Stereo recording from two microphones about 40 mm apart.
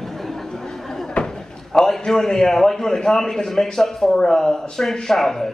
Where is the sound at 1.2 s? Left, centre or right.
Left.